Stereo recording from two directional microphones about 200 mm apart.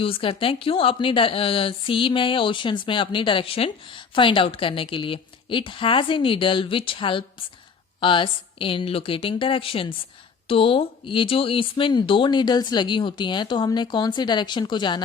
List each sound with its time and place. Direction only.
0.0 s speech: 25° left (ahead or behind)